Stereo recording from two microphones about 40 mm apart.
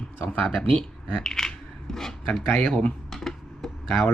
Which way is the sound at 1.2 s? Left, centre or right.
Centre.